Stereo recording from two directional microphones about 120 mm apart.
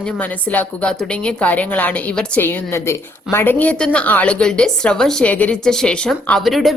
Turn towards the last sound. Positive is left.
turn(degrees=0)  # may be behind; listen again after turning